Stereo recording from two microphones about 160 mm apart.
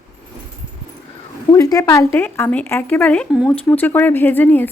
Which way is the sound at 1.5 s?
20° left (ahead or behind).